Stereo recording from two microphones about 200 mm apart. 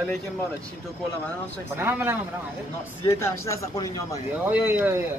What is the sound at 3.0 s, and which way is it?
Speech, 15° left (ahead or behind).